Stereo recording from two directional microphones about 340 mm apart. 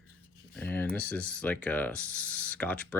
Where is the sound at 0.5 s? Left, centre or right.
Centre.